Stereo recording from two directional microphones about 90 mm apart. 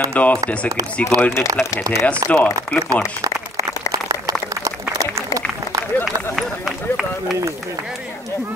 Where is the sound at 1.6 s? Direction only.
25° left (ahead or behind).